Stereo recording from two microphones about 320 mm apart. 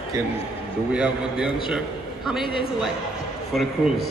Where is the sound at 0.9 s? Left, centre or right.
Centre.